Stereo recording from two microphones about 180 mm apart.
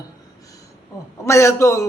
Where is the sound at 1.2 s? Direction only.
15° left (ahead or behind).